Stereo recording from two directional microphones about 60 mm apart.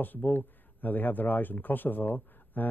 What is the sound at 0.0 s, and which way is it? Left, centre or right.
Speech, left.